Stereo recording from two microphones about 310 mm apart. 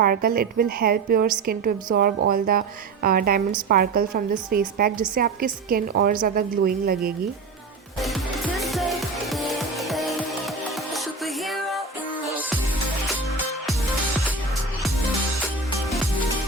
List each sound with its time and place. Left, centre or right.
0.0 s a woman's voice: right
8.5 s music: centre
11.4 s music: centre
13.7 s music: centre